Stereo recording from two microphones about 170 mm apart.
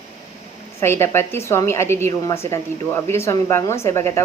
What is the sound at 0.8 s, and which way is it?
A woman's voice, 15° left (ahead or behind).